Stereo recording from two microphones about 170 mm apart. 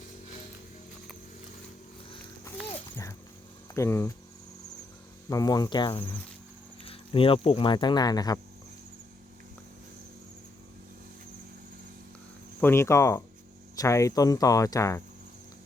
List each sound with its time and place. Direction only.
2.9 s a sound: 15° left (ahead or behind)
3.8 s speech: 15° left (ahead or behind)
5.3 s cricket: 20° left (ahead or behind)
6.8 s speech: 35° left (ahead or behind)
12.5 s speech: 15° left (ahead or behind)
13.7 s cricket: 20° left (ahead or behind)